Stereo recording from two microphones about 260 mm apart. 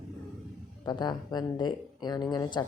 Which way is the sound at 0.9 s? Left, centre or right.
Centre.